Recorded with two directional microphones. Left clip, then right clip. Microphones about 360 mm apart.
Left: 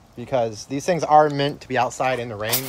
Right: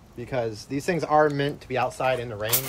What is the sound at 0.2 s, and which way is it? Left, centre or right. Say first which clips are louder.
Speech: left 6 dB; left.